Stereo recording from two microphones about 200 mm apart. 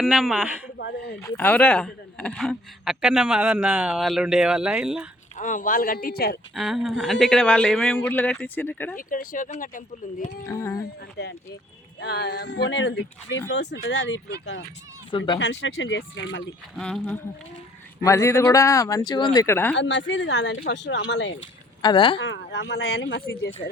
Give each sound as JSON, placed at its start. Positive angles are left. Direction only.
{"t": 0.0, "sound": "a man's voice", "side_deg": 0}
{"t": 0.8, "sound": "speech", "side_deg": 55}
{"t": 1.2, "sound": "a man's voice", "side_deg": 10}
{"t": 5.4, "sound": "speech", "side_deg": 40}
{"t": 6.5, "sound": "a man's voice", "side_deg": 0}
{"t": 9.0, "sound": "speech", "side_deg": 45}
{"t": 10.5, "sound": "speech", "side_deg": 15}
{"t": 11.2, "sound": "speech", "side_deg": 55}
{"t": 16.7, "sound": "a man's voice", "side_deg": 5}
{"t": 18.0, "sound": "speech", "side_deg": 15}
{"t": 19.7, "sound": "speech", "side_deg": 60}
{"t": 21.8, "sound": "speech", "side_deg": 25}
{"t": 22.2, "sound": "speech", "side_deg": 65}
{"t": 23.6, "sound": "speech", "side_deg": 30}